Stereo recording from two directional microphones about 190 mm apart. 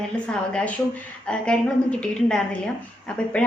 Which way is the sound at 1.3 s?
5° left (ahead or behind).